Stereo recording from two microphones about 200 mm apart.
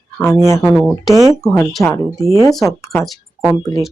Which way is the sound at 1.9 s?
15° left (ahead or behind).